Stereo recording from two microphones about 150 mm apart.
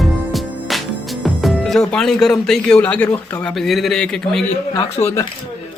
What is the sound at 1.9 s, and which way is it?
A man's voice, 5° left (ahead or behind).